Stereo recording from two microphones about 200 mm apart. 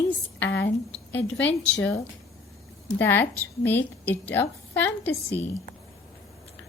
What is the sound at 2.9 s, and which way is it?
A woman's voice, 10° left (ahead or behind).